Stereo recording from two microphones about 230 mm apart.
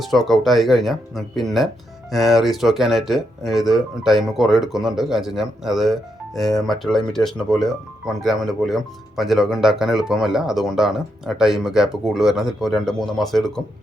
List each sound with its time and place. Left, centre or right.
0.0 s speech: centre